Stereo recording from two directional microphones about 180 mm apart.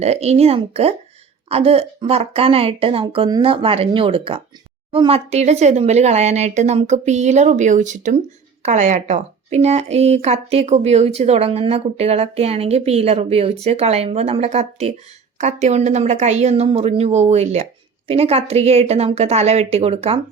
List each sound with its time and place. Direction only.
0.0 s a woman's voice: 35° right (ahead or behind)